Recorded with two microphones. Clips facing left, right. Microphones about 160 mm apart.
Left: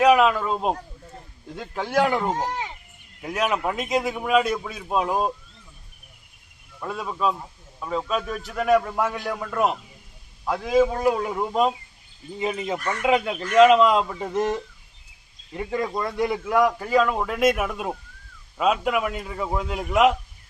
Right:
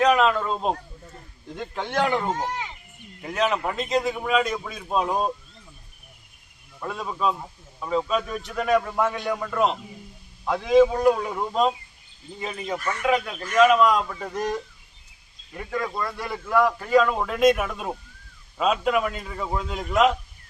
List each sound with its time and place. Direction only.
0.0 s a man's voice: 10° left (ahead or behind)
6.7 s a man's voice: centre (ahead or behind)
12.4 s a man's voice: 20° left (ahead or behind)